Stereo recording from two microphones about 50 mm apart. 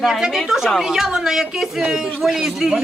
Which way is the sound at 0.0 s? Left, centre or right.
Centre.